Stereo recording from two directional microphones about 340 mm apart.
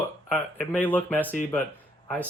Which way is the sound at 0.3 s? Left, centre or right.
Centre.